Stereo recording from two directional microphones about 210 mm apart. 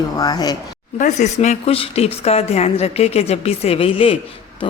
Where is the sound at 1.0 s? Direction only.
35° left (ahead or behind).